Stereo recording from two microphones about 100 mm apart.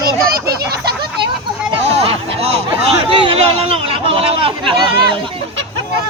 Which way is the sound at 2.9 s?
65° right (ahead or behind).